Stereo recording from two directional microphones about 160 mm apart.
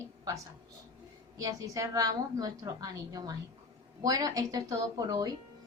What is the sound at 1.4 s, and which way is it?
A woman's voice, 20° right (ahead or behind).